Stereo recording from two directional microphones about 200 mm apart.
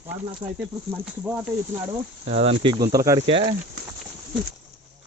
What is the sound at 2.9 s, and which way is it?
Speech, 15° right (ahead or behind).